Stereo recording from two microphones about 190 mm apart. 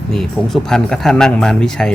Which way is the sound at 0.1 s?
Centre (ahead or behind).